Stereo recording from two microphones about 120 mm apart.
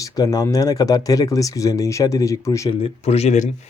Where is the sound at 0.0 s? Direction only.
30° left (ahead or behind).